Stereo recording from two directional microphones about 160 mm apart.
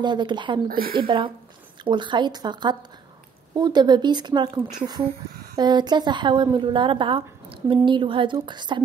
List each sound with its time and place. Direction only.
0.0 s a woman's voice: 30° right (ahead or behind)
0.7 s a woman's voice: 65° right (ahead or behind)
0.9 s a woman's voice: 30° right (ahead or behind)